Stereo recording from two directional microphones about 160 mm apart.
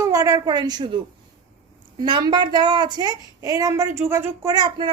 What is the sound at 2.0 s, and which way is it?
A woman's voice, 30° right (ahead or behind).